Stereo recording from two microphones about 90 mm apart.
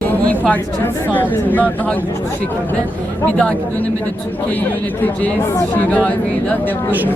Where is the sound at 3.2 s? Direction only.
15° left (ahead or behind).